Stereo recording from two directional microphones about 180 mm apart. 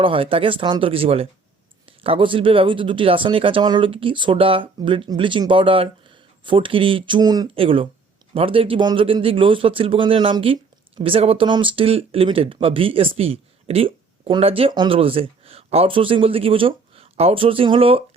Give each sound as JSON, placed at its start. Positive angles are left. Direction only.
{"t": 0.0, "sound": "speech", "side_deg": -30}